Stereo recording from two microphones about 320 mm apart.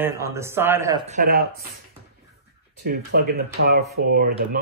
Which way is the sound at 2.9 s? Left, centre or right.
Right.